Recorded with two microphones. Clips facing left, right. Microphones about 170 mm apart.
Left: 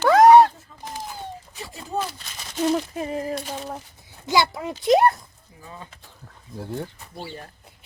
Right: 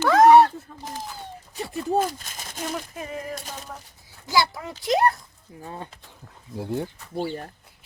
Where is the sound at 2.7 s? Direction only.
25° left (ahead or behind).